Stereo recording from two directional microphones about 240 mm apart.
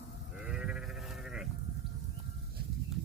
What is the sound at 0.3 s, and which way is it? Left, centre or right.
Sheep, centre.